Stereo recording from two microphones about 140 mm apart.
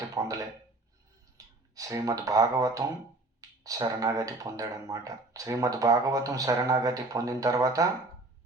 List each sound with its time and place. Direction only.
0.0 s a sound: 25° right (ahead or behind)
1.4 s clicking: 25° right (ahead or behind)
1.7 s speech: 25° right (ahead or behind)